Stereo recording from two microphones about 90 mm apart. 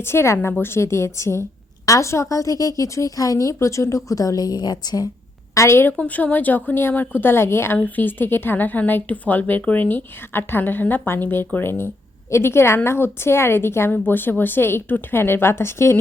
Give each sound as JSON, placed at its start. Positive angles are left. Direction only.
{"t": 0.0, "sound": "a woman's voice", "side_deg": 30}
{"t": 5.5, "sound": "a woman's voice", "side_deg": 30}
{"t": 6.0, "sound": "a woman's voice", "side_deg": 15}